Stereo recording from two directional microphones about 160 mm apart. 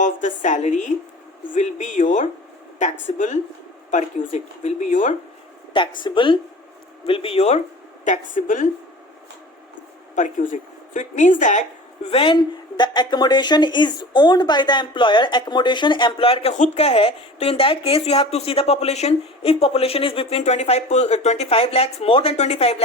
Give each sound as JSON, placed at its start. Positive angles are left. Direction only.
{"t": 0.0, "sound": "a woman's voice", "side_deg": 55}
{"t": 5.7, "sound": "speech", "side_deg": 30}
{"t": 8.0, "sound": "a woman's voice", "side_deg": 50}
{"t": 10.2, "sound": "a woman's voice", "side_deg": 50}
{"t": 12.1, "sound": "speech", "side_deg": 30}